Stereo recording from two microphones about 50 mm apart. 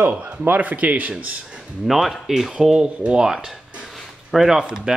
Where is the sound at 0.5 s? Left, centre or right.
Right.